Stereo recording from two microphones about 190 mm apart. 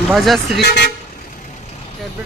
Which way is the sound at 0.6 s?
60° left (ahead or behind).